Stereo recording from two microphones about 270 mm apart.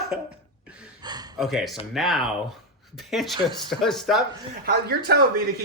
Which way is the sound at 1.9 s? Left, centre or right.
Centre.